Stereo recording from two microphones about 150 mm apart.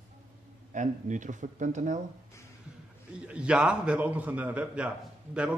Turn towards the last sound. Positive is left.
turn(degrees=-10)  # may be behind; listen again after turning